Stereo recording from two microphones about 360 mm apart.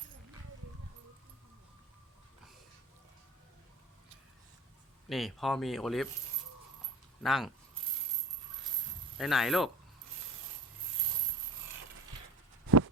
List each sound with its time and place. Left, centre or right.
5.0 s speech: centre
7.2 s speech: centre
9.1 s speech: centre
12.6 s a sound: right